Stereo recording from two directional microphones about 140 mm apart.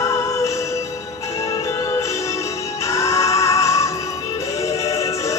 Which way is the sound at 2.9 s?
20° left (ahead or behind).